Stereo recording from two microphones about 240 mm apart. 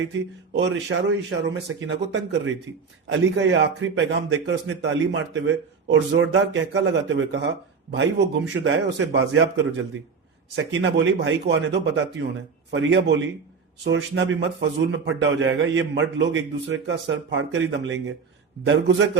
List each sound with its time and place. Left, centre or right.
0.1 s a man's voice: right
10.5 s a man's voice: right